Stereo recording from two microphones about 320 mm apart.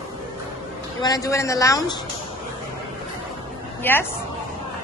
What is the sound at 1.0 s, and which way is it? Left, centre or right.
A man's voice, centre.